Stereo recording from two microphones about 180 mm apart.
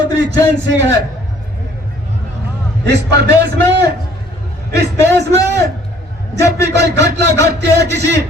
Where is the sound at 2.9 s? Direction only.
70° right (ahead or behind).